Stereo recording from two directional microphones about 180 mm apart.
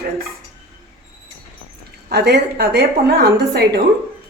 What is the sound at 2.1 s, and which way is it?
A woman's voice, 65° right (ahead or behind).